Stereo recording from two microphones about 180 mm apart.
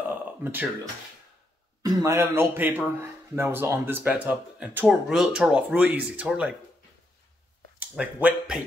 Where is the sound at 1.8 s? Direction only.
15° right (ahead or behind).